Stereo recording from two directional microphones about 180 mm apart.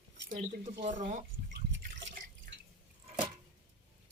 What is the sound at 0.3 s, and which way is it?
Speech, 45° right (ahead or behind).